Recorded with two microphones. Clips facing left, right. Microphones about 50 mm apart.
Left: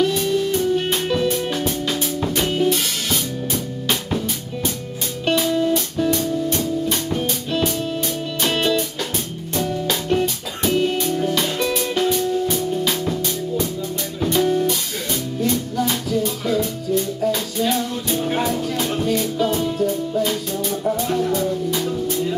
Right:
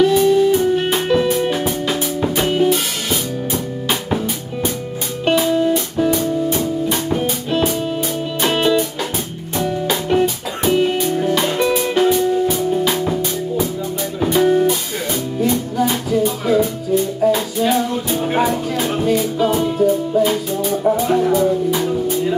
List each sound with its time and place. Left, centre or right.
0.0 s music: centre
5.2 s music: centre